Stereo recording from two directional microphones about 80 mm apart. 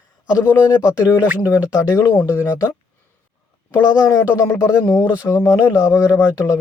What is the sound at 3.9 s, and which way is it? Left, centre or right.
Speech, left.